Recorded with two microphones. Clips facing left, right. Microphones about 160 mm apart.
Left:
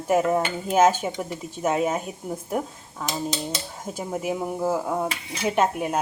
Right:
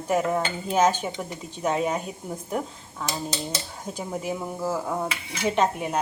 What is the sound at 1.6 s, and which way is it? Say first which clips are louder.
Speech: left 2 dB; 5° left (ahead or behind).